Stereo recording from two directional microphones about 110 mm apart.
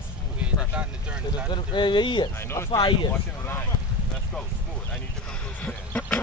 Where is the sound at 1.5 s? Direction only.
45° left (ahead or behind).